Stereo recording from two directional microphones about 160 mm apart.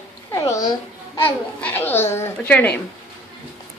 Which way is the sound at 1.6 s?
10° left (ahead or behind).